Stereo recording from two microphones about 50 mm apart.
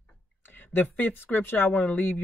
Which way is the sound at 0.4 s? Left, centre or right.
Left.